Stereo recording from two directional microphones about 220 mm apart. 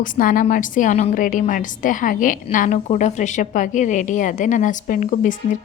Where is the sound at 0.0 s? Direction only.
40° left (ahead or behind).